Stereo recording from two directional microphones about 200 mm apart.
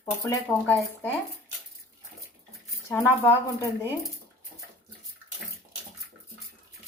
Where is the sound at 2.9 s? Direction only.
10° left (ahead or behind).